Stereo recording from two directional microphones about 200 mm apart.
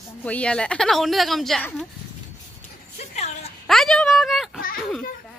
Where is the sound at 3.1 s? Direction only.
35° left (ahead or behind).